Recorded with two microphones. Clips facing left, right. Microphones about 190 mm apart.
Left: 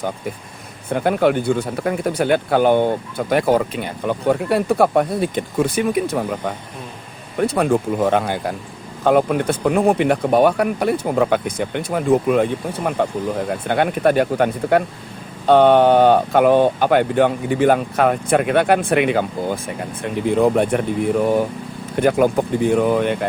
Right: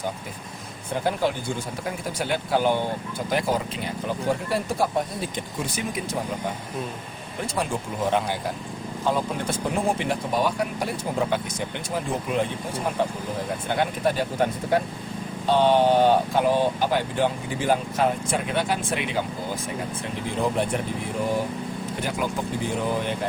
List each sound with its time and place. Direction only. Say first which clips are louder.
0.9 s speech: left 8 dB; 60° left (ahead or behind)